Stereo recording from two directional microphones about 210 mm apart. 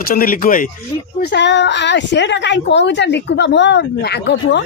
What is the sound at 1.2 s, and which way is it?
A woman's voice, 55° left (ahead or behind).